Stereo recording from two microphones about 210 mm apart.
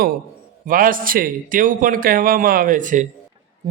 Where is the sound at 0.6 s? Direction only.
40° right (ahead or behind).